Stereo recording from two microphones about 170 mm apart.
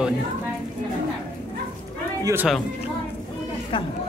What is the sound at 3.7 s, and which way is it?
Speech, 30° left (ahead or behind).